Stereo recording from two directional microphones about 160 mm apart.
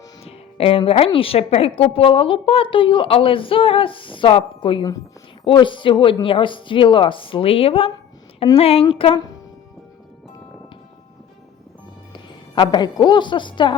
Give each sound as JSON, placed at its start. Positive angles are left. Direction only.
{"t": 0.3, "sound": "a woman's voice", "side_deg": 35}
{"t": 12.1, "sound": "a woman's voice", "side_deg": 30}